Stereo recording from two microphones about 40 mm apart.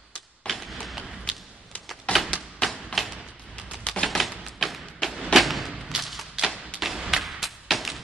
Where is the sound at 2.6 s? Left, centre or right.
Centre.